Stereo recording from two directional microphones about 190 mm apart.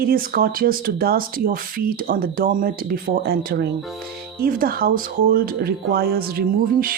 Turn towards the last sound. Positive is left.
turn(degrees=-50)  # may be behind; listen again after turning